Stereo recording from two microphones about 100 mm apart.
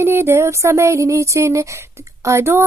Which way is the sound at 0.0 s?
25° right (ahead or behind).